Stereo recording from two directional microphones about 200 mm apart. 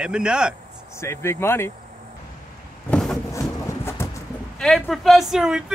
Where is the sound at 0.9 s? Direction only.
15° left (ahead or behind).